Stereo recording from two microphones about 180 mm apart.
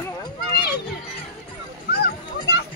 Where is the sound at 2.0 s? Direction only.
65° left (ahead or behind).